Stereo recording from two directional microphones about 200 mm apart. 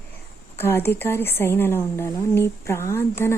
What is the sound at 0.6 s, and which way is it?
Speech, 10° left (ahead or behind).